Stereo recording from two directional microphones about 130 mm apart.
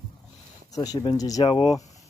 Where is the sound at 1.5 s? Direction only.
40° left (ahead or behind).